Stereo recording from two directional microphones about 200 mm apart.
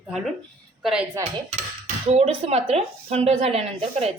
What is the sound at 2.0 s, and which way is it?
Speech, 30° right (ahead or behind).